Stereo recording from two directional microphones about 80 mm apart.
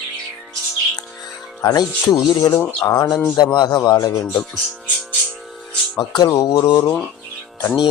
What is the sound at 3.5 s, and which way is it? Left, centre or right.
Speech, left.